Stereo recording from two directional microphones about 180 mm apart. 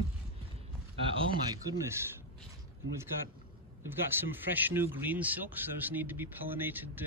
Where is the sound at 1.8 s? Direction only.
15° right (ahead or behind).